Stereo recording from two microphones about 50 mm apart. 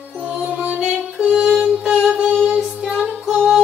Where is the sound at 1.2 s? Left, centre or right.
Centre.